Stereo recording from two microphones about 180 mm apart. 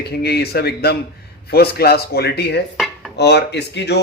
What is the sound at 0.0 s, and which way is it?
A man's voice, 65° left (ahead or behind).